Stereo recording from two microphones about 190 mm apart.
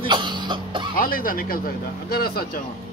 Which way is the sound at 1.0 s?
50° left (ahead or behind).